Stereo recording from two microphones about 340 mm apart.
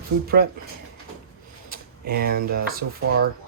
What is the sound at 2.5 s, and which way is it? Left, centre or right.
Speech, right.